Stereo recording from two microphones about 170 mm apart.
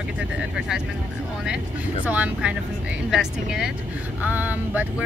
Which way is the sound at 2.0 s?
10° right (ahead or behind).